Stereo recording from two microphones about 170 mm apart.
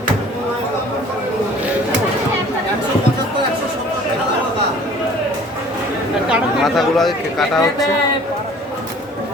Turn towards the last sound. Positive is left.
turn(degrees=0)  # may be behind; listen again after turning